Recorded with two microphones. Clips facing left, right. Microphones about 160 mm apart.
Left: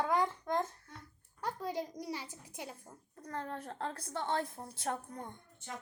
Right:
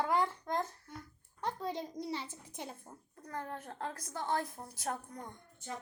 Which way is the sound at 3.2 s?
30° left (ahead or behind).